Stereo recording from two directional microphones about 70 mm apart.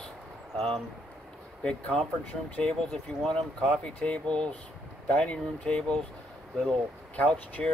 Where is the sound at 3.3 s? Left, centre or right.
Centre.